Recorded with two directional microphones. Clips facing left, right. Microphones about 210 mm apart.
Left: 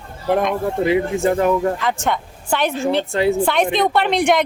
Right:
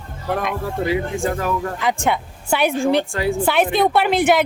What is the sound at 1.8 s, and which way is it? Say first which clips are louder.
A woman's voice: right 1 dB; 10° right (ahead or behind).